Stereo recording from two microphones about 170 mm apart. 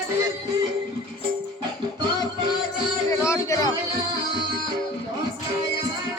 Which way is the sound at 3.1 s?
15° left (ahead or behind).